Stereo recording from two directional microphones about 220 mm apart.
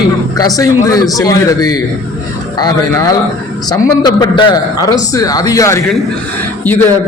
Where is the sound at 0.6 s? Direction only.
15° left (ahead or behind).